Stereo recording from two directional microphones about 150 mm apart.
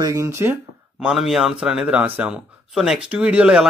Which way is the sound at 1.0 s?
5° right (ahead or behind).